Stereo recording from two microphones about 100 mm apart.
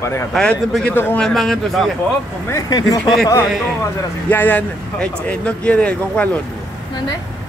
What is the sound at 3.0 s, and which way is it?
Speech, centre (ahead or behind).